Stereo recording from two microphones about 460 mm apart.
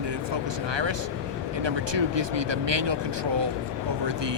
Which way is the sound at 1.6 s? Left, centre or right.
Right.